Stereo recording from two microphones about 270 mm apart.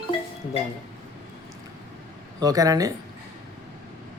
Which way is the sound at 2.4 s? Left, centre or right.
Centre.